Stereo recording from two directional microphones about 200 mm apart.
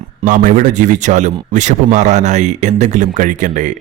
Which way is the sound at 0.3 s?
40° right (ahead or behind).